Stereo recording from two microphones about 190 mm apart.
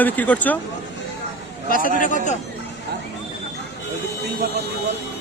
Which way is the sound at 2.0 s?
40° left (ahead or behind).